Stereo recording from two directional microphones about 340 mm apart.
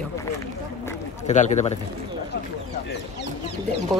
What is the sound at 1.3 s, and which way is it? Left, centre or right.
Speech, left.